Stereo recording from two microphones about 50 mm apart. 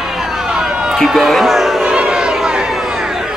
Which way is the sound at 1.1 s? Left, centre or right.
Centre.